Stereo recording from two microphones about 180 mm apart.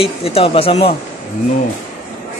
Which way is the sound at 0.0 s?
35° left (ahead or behind).